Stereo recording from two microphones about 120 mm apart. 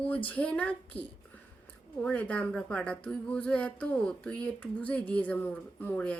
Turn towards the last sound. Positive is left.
turn(degrees=10)  # may be behind; listen again after turning